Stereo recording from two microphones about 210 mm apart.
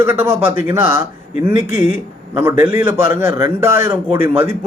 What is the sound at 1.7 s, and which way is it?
Speech, 35° left (ahead or behind).